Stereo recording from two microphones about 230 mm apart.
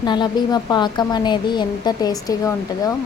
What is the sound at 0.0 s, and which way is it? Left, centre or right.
A woman's voice, centre.